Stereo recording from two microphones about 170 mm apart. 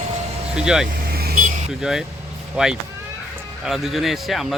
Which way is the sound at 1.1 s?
60° right (ahead or behind).